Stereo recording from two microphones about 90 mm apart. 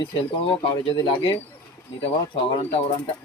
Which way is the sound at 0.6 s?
65° left (ahead or behind).